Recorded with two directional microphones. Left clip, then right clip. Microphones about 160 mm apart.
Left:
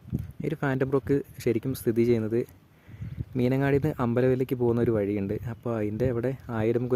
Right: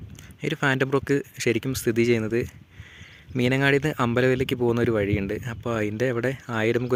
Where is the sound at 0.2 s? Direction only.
Centre (ahead or behind).